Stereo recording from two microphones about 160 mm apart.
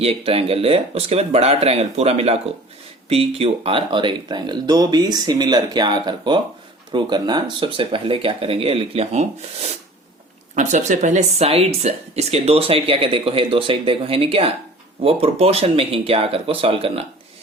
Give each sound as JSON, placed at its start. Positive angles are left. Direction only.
{"t": 0.0, "sound": "speech", "side_deg": -40}